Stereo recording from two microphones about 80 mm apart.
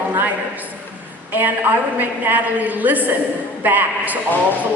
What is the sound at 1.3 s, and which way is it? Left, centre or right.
A woman's voice, right.